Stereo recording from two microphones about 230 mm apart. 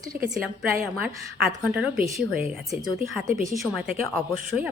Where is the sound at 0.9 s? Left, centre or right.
Centre.